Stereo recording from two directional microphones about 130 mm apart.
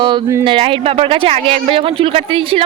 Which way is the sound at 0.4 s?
45° right (ahead or behind).